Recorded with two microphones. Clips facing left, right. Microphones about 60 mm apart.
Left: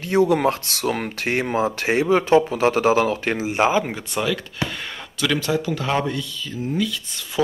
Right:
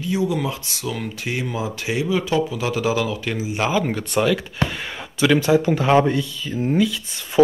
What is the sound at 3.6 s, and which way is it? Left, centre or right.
Speech, left.